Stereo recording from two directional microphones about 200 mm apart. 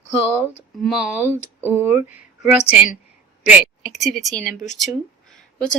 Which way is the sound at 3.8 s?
Centre (ahead or behind).